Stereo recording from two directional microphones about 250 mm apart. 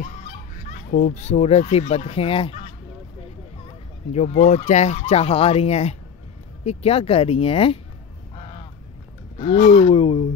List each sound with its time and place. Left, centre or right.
0.0 s speech: left
4.1 s speech: left
8.4 s a sound: left
9.4 s speech: left